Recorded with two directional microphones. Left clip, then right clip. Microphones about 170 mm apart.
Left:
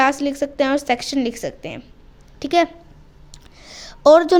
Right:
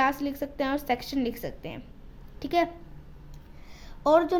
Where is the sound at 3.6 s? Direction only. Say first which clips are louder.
Left 13 dB; 60° left (ahead or behind).